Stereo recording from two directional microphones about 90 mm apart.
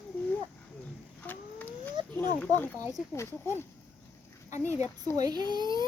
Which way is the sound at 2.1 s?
15° left (ahead or behind).